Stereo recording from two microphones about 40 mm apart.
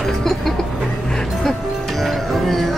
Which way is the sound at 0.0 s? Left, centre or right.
Centre.